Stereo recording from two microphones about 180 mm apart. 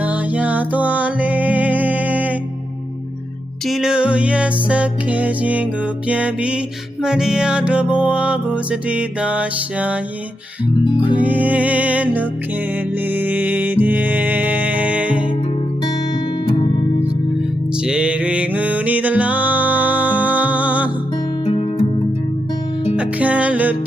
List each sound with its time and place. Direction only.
0.0 s music: 10° right (ahead or behind)
3.7 s music: 5° right (ahead or behind)
10.8 s music: 25° left (ahead or behind)
11.2 s music: 10° right (ahead or behind)
17.8 s music: 5° right (ahead or behind)
21.4 s music: 30° left (ahead or behind)
23.0 s music: 10° right (ahead or behind)